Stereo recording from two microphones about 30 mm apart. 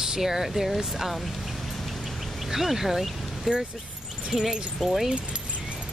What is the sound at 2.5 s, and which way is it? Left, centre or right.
Speech, centre.